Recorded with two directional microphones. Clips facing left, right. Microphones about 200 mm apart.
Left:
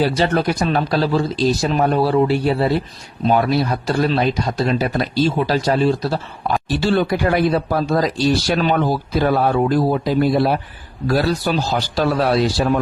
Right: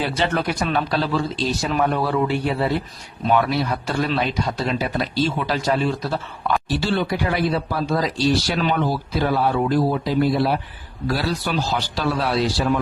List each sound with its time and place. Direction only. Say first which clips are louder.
0.0 s speech: left 5 dB; 40° left (ahead or behind)
7.1 s speech: left 5 dB; 50° left (ahead or behind)